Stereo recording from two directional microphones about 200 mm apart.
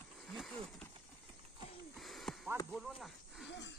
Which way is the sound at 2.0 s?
Centre (ahead or behind).